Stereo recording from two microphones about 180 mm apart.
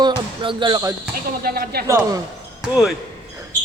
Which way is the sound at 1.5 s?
60° right (ahead or behind).